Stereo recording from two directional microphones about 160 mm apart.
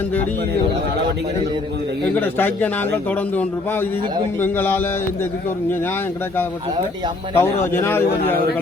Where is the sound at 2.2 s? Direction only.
10° left (ahead or behind).